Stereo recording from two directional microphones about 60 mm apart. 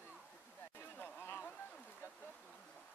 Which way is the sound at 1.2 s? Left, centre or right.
Left.